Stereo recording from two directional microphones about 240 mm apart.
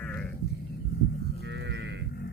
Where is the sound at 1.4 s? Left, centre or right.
Right.